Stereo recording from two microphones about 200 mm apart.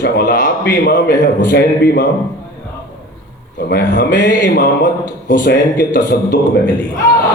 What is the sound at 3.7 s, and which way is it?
Speech, 55° left (ahead or behind).